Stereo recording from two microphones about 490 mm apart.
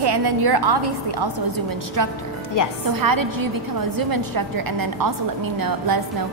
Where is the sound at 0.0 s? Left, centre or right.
Right.